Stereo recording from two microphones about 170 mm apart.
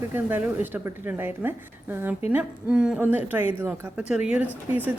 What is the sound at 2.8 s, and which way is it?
Speech, 10° right (ahead or behind).